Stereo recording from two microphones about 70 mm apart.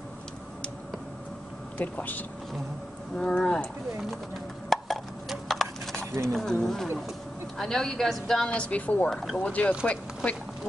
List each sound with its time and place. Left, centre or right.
1.8 s speech: left
3.2 s speech: centre
4.6 s a sound: centre
6.2 s speech: centre; by 9.1 s left
9.1 s speech: centre
9.4 s speech: left